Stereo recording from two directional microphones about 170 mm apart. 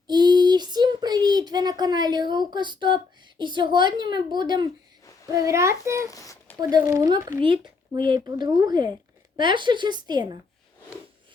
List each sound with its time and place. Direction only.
0.1 s a child's voice: 25° right (ahead or behind)
6.1 s a sound: 20° left (ahead or behind)
6.6 s speech: 20° right (ahead or behind)